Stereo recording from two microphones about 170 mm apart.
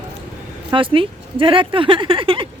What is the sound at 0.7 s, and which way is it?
Speech, 30° right (ahead or behind).